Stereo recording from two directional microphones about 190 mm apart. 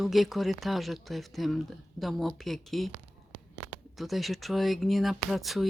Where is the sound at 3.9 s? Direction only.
Centre (ahead or behind).